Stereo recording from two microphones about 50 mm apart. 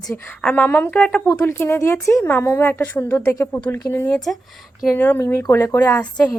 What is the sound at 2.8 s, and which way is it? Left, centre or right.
Speech, left.